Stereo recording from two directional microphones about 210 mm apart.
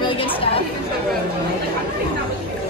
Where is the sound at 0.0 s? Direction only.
25° left (ahead or behind).